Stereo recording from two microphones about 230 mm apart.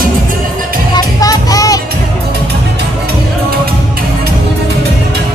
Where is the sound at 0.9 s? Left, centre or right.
Centre.